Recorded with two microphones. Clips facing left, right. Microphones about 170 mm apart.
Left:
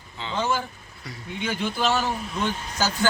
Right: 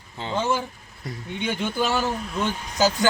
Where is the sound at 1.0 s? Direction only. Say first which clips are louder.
Right 5 dB; 50° right (ahead or behind).